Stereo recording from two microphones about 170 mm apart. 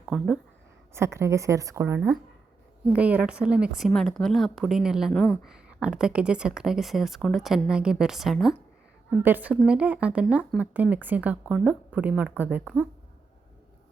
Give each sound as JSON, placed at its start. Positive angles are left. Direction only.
{"t": 0.0, "sound": "speech", "side_deg": -5}
{"t": 0.9, "sound": "speech", "side_deg": -15}